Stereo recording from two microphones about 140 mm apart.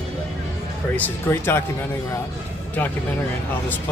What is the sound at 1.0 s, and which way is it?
Speech, 15° left (ahead or behind).